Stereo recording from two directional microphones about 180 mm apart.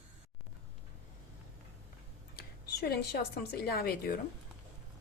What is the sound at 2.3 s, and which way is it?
Speech, 60° left (ahead or behind).